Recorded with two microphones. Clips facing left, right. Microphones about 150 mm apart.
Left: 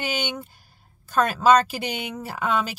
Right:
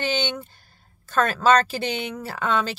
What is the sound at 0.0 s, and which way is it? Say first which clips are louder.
Speech: right 3 dB; 10° left (ahead or behind).